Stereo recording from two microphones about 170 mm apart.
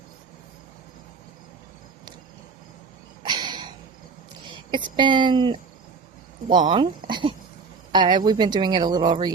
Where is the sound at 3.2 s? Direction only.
25° right (ahead or behind).